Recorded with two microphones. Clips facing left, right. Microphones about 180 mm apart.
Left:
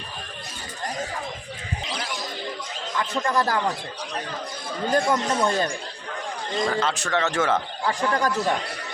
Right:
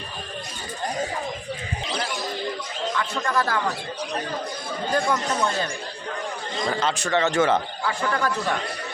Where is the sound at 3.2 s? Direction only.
40° left (ahead or behind).